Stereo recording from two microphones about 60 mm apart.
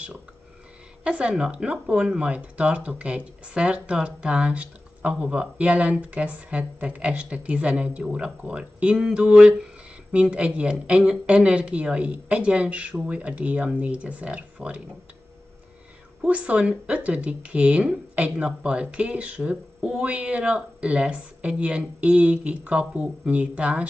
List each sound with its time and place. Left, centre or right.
1.0 s speech: centre
9.0 s a sound: centre
10.3 s speech: centre
16.3 s speech: right